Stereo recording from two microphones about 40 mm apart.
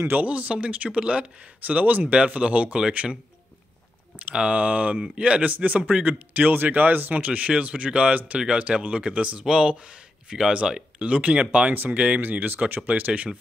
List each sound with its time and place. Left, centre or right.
0.1 s speech: right
1.6 s speech: right
2.1 s speech: right
4.4 s speech: right
5.0 s speech: right
5.4 s speech: right
10.6 s speech: centre
11.0 s speech: right
11.7 s speech: right